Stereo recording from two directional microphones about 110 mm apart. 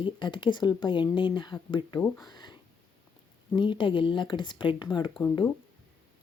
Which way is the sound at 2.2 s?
45° left (ahead or behind).